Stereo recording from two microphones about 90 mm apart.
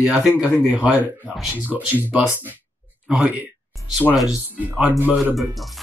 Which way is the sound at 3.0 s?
15° right (ahead or behind).